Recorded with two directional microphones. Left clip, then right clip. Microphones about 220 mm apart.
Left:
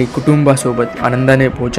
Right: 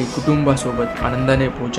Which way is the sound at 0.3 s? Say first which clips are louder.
Left 6 dB; 25° left (ahead or behind).